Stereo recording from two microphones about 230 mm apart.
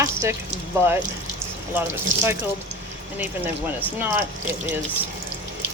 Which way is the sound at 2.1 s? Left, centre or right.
Right.